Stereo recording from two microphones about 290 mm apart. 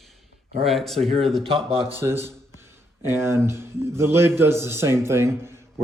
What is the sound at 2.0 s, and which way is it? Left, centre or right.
Speech, centre.